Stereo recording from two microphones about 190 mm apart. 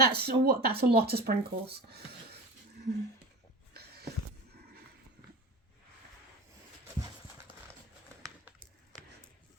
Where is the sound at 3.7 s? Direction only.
55° right (ahead or behind).